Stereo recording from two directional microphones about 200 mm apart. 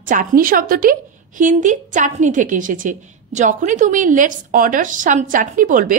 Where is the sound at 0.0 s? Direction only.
40° right (ahead or behind).